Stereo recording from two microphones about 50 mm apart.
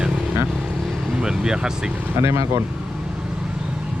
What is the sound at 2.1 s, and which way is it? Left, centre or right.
Speech, right.